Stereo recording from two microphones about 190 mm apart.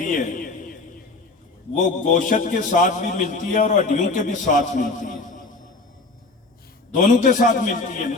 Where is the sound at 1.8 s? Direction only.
40° left (ahead or behind).